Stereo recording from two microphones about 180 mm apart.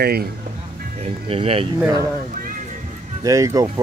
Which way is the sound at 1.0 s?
30° right (ahead or behind).